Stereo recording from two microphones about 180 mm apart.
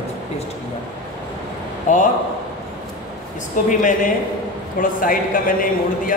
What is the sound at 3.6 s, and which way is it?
A man's voice, 45° left (ahead or behind).